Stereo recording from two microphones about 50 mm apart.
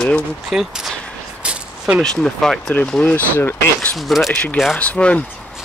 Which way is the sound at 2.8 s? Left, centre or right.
Centre.